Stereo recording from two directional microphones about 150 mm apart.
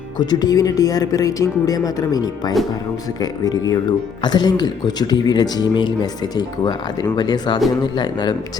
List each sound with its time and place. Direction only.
0.2 s speech: 25° left (ahead or behind)